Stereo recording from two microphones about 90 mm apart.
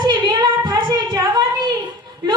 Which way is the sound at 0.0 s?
55° right (ahead or behind).